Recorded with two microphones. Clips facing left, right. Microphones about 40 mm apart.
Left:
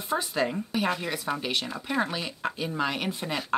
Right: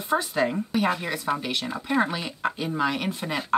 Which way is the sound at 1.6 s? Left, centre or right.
Centre.